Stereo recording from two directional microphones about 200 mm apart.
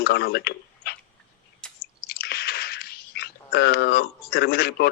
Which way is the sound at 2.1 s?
55° left (ahead or behind).